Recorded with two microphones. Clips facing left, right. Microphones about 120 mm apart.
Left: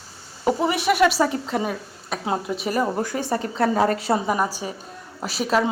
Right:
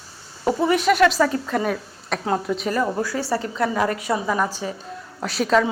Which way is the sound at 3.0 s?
20° left (ahead or behind).